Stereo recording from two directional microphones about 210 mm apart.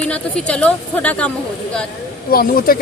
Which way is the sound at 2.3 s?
45° left (ahead or behind).